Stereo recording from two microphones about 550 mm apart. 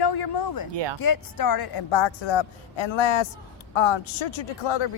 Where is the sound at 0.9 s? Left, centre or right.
Left.